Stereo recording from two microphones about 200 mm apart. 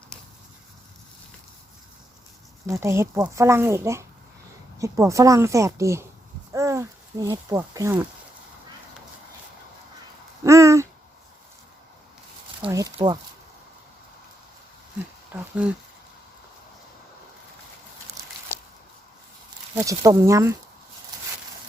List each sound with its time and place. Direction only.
2.6 s speech: 15° right (ahead or behind)
10.4 s a sound: 15° right (ahead or behind)
12.6 s speech: 15° right (ahead or behind)
15.3 s speech: 10° right (ahead or behind)
18.5 s squish: 10° left (ahead or behind)
19.7 s speech: 15° right (ahead or behind)